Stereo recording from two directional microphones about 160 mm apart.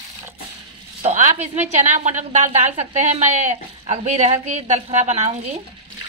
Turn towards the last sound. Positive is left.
turn(degrees=-45)  # may be behind; listen again after turning